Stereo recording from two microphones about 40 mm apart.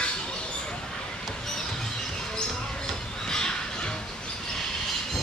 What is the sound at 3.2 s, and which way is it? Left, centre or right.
Squawk, centre.